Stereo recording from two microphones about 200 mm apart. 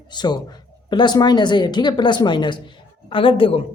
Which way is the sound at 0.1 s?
20° left (ahead or behind).